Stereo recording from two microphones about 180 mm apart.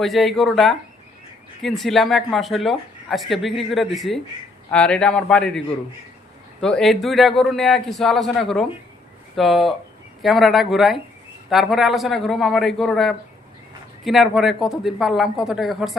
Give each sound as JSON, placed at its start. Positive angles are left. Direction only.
{"t": 0.0, "sound": "a man's voice", "side_deg": 0}